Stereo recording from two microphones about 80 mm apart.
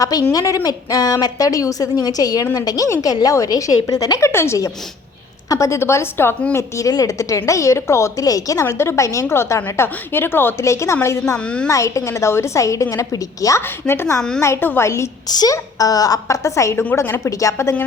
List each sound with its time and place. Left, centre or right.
0.0 s a woman's voice: left
4.3 s a woman's voice: left
8.6 s a woman's voice: left
11.3 s a woman's voice: centre
11.7 s a woman's voice: left
13.6 s a woman's voice: left
14.2 s a woman's voice: centre
14.4 s a woman's voice: left
15.3 s a woman's voice: left
16.7 s a woman's voice: left